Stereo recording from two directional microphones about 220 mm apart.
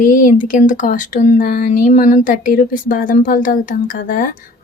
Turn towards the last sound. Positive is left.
turn(degrees=40)  # may be behind; listen again after turning